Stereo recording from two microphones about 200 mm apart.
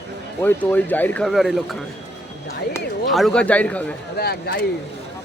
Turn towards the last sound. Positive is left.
turn(degrees=50)  # may be behind; listen again after turning